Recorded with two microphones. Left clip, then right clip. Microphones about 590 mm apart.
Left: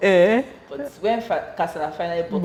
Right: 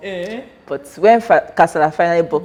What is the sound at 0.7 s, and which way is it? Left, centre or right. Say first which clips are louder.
A woman's voice: right 13 dB; right.